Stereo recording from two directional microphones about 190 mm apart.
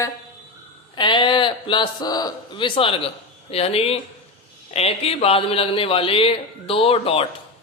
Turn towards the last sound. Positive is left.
turn(degrees=30)  # may be behind; listen again after turning